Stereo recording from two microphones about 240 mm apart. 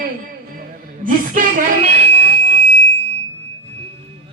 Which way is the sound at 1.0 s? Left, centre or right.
Right.